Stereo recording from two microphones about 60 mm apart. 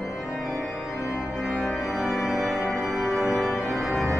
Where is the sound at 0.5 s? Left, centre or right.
Left.